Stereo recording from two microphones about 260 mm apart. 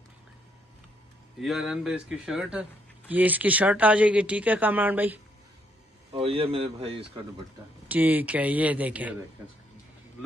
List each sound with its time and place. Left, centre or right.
1.4 s speech: centre
6.1 s speech: right
7.9 s speech: centre